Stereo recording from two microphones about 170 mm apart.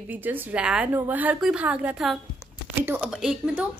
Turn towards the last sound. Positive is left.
turn(degrees=-5)  # may be behind; listen again after turning